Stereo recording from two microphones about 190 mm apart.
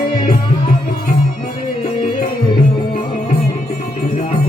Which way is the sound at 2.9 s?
40° left (ahead or behind).